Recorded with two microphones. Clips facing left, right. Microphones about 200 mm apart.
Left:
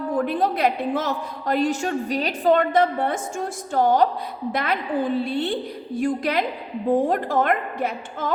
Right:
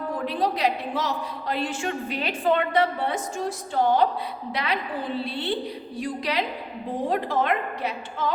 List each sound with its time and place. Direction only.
0.3 s a woman's voice: 50° left (ahead or behind)